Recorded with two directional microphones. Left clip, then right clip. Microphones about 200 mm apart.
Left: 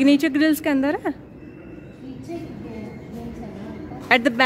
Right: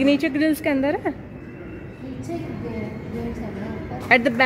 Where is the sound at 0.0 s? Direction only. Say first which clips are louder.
Left 2 dB; 30° left (ahead or behind).